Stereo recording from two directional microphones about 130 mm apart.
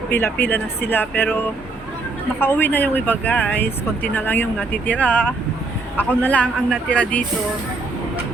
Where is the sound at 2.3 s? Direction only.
15° left (ahead or behind).